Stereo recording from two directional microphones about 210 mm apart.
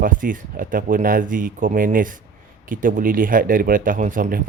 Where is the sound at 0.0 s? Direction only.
40° right (ahead or behind).